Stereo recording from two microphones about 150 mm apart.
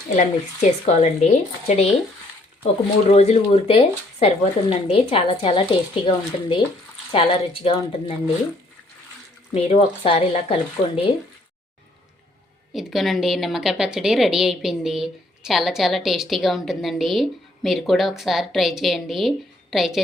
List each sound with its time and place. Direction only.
0.2 s speech: 50° left (ahead or behind)
3.1 s speech: 45° left (ahead or behind)
9.6 s speech: 40° left (ahead or behind)
12.7 s a woman's voice: centre (ahead or behind)